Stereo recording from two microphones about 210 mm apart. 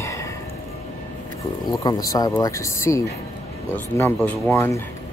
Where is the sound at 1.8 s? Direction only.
15° left (ahead or behind).